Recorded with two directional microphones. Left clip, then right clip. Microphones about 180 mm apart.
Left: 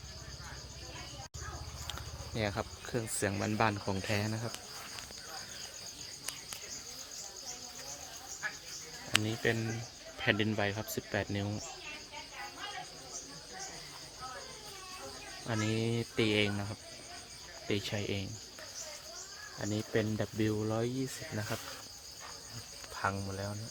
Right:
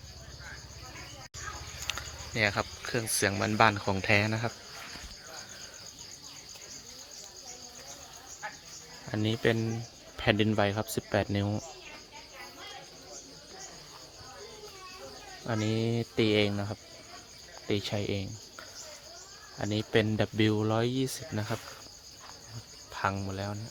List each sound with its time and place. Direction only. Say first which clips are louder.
1.9 s speech: right 8 dB; centre (ahead or behind)
9.2 s speech: right 5 dB; 25° right (ahead or behind)
15.4 s cricket: right 3 dB; 15° right (ahead or behind)
17.7 s cricket: right 4 dB; 15° right (ahead or behind)
19.6 s speech: right 6 dB; 25° right (ahead or behind)
23.0 s speech: right 4 dB; 30° right (ahead or behind)